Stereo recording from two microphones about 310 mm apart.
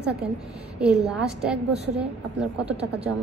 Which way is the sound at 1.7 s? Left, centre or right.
Right.